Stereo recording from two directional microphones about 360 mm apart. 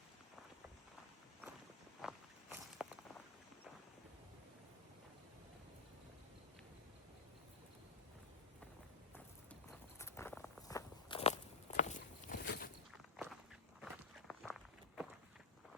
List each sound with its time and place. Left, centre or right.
2.0 s walk: centre
10.0 s walk: centre
11.8 s a sound: left
12.9 s walk: centre